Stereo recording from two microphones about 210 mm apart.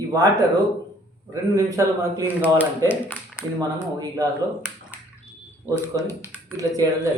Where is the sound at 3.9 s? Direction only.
15° right (ahead or behind).